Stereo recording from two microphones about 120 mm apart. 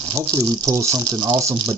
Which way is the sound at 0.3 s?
30° right (ahead or behind).